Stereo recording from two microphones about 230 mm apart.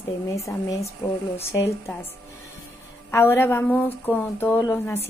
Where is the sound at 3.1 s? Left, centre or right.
Centre.